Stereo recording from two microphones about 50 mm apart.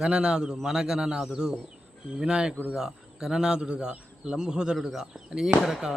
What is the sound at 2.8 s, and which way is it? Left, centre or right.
Speech, centre.